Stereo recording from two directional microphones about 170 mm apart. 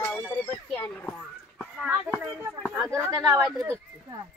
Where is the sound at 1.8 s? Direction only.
10° right (ahead or behind).